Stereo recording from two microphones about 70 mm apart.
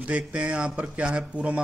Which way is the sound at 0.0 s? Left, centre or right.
Centre.